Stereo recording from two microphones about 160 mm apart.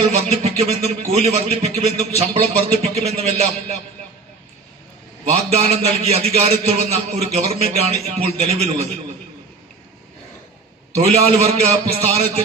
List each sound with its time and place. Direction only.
0.0 s a man's voice: 40° right (ahead or behind)
5.3 s a man's voice: 40° right (ahead or behind)
10.9 s a man's voice: 40° right (ahead or behind)